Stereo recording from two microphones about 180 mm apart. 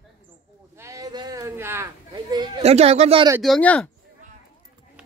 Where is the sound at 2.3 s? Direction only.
25° right (ahead or behind).